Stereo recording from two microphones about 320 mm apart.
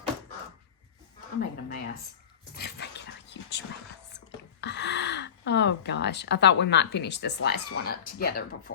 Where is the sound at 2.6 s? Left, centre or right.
Left.